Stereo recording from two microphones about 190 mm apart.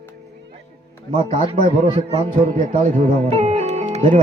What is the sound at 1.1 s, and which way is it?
A man's voice, 40° right (ahead or behind).